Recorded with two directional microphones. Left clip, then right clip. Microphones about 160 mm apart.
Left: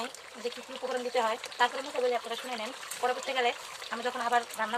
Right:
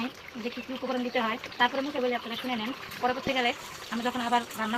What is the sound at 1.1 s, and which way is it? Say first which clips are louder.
Speech: even; 65° left (ahead or behind).